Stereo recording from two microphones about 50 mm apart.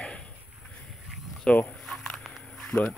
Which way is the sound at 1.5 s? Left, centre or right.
Centre.